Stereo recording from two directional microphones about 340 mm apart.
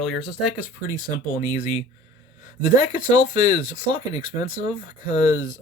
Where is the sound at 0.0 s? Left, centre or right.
Centre.